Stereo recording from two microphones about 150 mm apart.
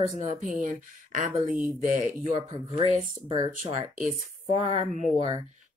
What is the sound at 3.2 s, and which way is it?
Speech, 35° right (ahead or behind).